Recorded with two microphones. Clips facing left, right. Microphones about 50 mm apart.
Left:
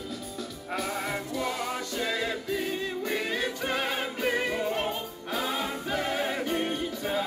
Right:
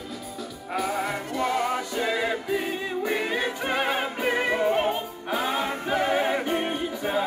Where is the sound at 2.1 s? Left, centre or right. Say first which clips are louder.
Right 5 dB; centre.